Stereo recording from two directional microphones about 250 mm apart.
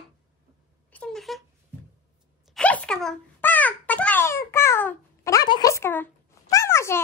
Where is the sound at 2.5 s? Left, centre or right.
Centre.